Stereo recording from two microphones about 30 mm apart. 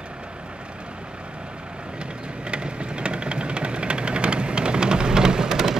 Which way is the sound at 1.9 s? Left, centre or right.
Right.